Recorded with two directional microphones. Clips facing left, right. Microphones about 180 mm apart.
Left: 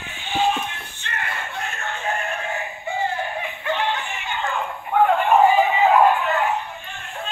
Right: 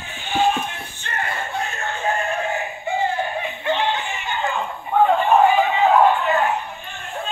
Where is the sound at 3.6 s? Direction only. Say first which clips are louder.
Right 2 dB; 25° right (ahead or behind).